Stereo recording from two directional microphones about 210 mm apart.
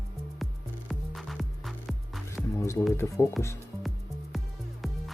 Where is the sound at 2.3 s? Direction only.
15° left (ahead or behind).